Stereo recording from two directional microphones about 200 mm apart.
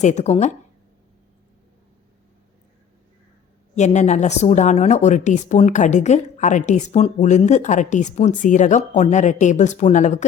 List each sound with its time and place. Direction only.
0.0 s speech: 35° left (ahead or behind)
3.8 s speech: 35° left (ahead or behind)